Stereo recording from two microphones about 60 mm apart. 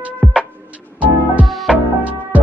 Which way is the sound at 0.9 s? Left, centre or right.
Right.